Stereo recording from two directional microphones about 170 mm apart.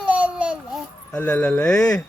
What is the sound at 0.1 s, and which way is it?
Babbling, 5° right (ahead or behind).